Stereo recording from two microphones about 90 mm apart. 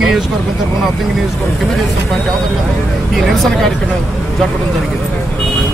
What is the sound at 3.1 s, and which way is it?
Speech, centre (ahead or behind).